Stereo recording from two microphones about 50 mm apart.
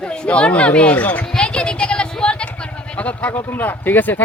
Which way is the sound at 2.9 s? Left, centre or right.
Left.